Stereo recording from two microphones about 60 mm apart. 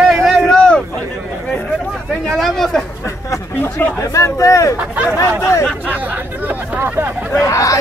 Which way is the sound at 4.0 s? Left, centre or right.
Left.